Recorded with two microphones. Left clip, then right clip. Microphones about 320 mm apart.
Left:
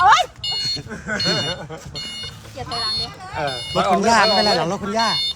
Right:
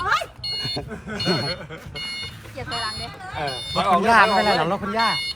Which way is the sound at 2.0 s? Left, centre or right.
Centre.